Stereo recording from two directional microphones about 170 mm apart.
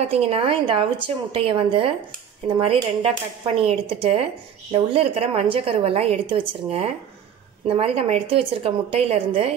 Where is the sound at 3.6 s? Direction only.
35° right (ahead or behind).